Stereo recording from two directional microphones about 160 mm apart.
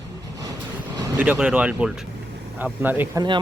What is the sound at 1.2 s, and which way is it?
Speech, 10° right (ahead or behind).